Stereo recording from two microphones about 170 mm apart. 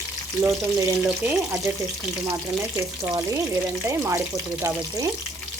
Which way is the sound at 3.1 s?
20° right (ahead or behind).